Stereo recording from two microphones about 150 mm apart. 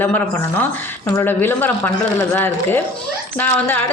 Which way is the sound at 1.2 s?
15° left (ahead or behind).